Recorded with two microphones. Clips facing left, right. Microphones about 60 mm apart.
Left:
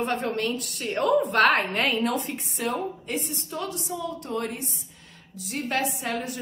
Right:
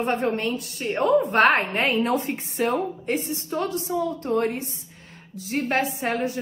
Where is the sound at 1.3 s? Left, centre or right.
Right.